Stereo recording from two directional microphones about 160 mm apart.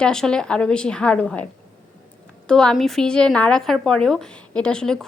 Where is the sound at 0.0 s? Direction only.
5° left (ahead or behind).